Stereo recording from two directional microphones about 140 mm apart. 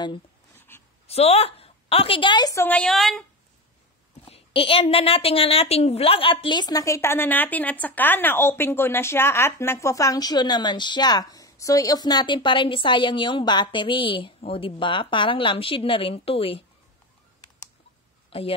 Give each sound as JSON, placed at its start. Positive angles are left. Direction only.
{"t": 0.6, "sound": "a sound", "side_deg": 15}
{"t": 1.0, "sound": "a woman's voice", "side_deg": 45}
{"t": 2.6, "sound": "a woman's voice", "side_deg": 5}
{"t": 4.3, "sound": "a woman's voice", "side_deg": 40}